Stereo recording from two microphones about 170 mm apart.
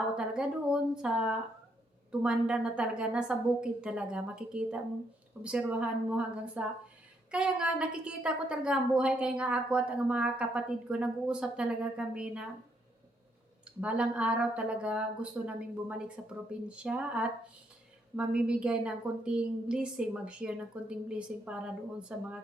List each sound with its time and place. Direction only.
0.2 s a woman's voice: 5° right (ahead or behind)
13.8 s a woman's voice: 5° right (ahead or behind)